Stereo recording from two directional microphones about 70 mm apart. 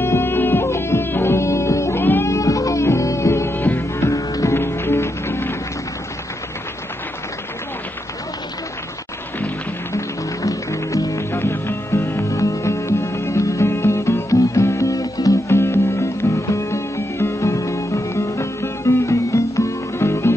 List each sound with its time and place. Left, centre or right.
0.0 s music: left
2.2 s music: left
3.5 s music: left
4.0 s music: left
4.6 s music: left
9.9 s music: left
11.3 s music: left